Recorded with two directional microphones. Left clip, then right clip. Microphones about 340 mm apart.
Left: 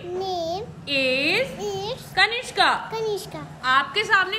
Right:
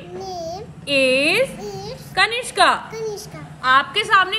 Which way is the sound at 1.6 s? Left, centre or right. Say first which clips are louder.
Left 3 dB; centre.